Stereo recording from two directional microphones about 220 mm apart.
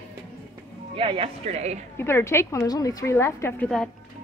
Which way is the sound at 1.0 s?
25° right (ahead or behind).